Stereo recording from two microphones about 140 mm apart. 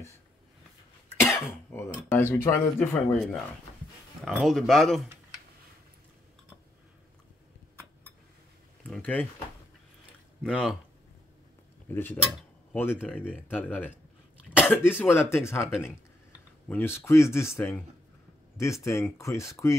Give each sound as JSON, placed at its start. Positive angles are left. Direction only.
{"t": 1.2, "sound": "cough", "side_deg": 15}
{"t": 2.0, "sound": "speech", "side_deg": 15}
{"t": 2.9, "sound": "speech", "side_deg": 5}
{"t": 8.8, "sound": "speech", "side_deg": 10}
{"t": 10.4, "sound": "speech", "side_deg": 5}
{"t": 11.9, "sound": "cutlery", "side_deg": 15}
{"t": 13.5, "sound": "speech", "side_deg": 10}
{"t": 18.9, "sound": "speech", "side_deg": 20}